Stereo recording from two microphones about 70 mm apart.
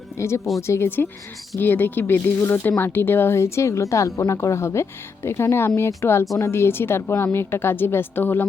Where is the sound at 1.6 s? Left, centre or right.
Left.